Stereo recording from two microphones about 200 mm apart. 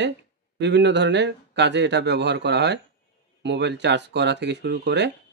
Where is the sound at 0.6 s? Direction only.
60° right (ahead or behind).